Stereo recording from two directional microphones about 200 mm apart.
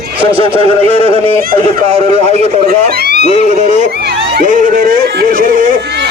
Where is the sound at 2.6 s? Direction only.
50° right (ahead or behind).